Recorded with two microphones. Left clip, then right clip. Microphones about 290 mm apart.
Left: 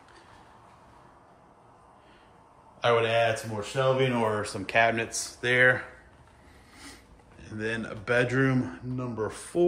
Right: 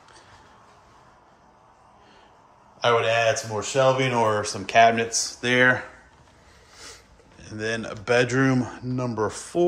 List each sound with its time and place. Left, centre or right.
2.8 s speech: centre
7.3 s speech: centre